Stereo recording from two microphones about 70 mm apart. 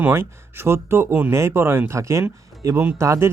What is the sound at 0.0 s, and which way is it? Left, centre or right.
Speech, right.